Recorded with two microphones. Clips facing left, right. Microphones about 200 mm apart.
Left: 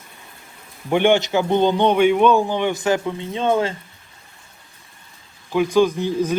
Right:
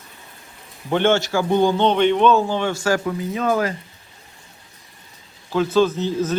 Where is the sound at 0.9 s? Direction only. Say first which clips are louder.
Left 2 dB; 15° left (ahead or behind).